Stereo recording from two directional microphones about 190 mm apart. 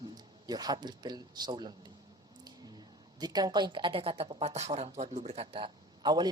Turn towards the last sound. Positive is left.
turn(degrees=-20)  # may be behind; listen again after turning